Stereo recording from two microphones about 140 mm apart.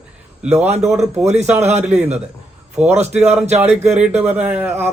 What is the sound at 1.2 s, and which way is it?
Speech, 55° right (ahead or behind).